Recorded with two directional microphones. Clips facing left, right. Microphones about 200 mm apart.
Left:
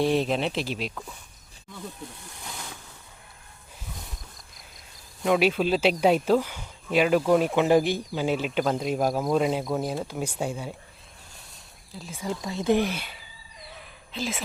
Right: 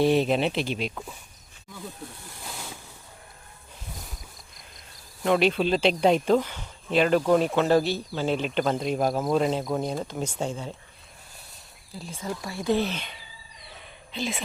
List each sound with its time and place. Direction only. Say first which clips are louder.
0.0 s speech: right 2 dB; centre (ahead or behind)
2.5 s a sound: right 1 dB; 5° right (ahead or behind)
5.2 s speech: even; 5° left (ahead or behind)
11.9 s speech: right 1 dB; centre (ahead or behind)
12.2 s speech: left 3 dB; 20° left (ahead or behind); by 14.4 s centre (ahead or behind)